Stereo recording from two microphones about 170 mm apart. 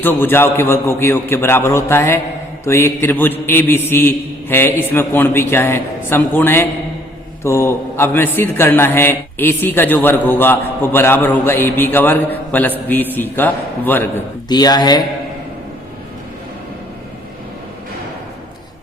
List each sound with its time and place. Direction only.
0.0 s a man's voice: 10° left (ahead or behind)
14.5 s speech: 25° left (ahead or behind)